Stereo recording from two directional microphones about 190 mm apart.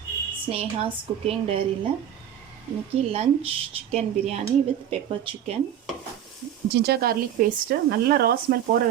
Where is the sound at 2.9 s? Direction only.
35° right (ahead or behind).